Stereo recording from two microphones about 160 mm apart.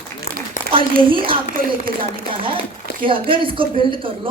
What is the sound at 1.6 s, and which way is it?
Speech, 70° right (ahead or behind).